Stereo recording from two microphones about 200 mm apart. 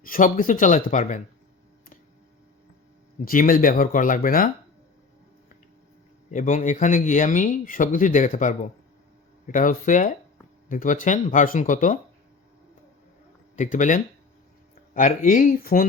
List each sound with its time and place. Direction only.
0.0 s speech: 45° left (ahead or behind)
3.2 s speech: 45° left (ahead or behind)
6.3 s speech: 40° left (ahead or behind)
13.6 s speech: 40° left (ahead or behind)